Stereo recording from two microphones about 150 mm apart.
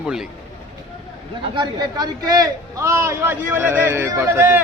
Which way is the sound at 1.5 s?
25° right (ahead or behind).